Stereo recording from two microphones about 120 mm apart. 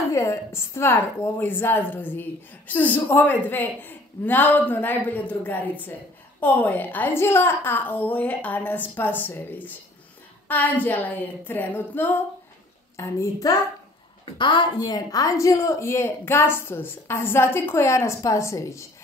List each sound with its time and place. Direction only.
0.1 s a woman's voice: 25° left (ahead or behind)
14.4 s a woman's voice: 40° left (ahead or behind); by 18.9 s 25° left (ahead or behind)